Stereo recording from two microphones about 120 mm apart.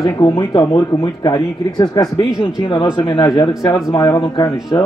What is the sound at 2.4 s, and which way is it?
Speech, 45° left (ahead or behind).